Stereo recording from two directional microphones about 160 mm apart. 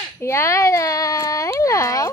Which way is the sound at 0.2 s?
15° left (ahead or behind).